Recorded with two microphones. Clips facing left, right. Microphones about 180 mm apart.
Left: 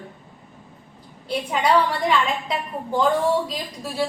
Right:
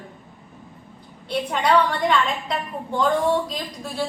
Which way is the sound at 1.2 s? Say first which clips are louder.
Even; 5° left (ahead or behind).